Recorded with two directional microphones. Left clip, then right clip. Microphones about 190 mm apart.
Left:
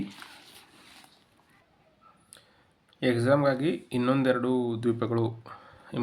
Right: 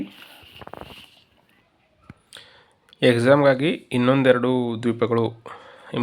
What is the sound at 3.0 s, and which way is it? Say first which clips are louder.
Speech: right 8 dB; 35° right (ahead or behind).